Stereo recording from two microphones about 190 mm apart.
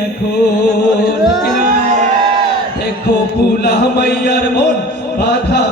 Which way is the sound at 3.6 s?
55° left (ahead or behind).